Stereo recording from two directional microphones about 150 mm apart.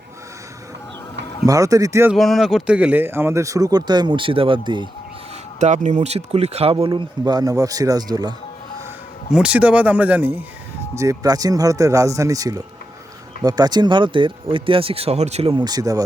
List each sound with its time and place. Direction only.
1.5 s speech: 20° right (ahead or behind)
2.1 s speech: centre (ahead or behind); by 4.9 s 30° right (ahead or behind)
5.5 s speech: 50° right (ahead or behind); by 8.3 s 25° right (ahead or behind)
9.3 s speech: 10° right (ahead or behind)
10.9 s speech: 20° right (ahead or behind); by 15.5 s 45° right (ahead or behind)
15.5 s speech: 25° right (ahead or behind)